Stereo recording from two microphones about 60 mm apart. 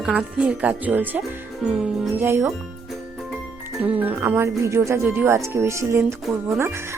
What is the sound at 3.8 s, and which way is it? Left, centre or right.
Speech, right.